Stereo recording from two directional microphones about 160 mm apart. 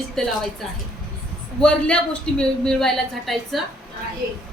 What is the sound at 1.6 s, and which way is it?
A woman's voice, 5° left (ahead or behind).